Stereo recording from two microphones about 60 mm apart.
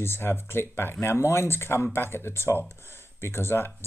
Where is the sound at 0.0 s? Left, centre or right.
Left.